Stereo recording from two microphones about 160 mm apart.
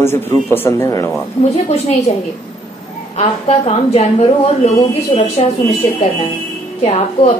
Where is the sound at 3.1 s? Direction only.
40° left (ahead or behind).